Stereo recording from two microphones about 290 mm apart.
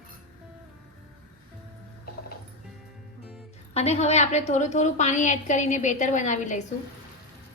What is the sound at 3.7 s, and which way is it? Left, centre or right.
A woman's voice, left.